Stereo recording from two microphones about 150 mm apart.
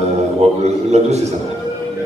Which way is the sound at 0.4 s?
45° right (ahead or behind).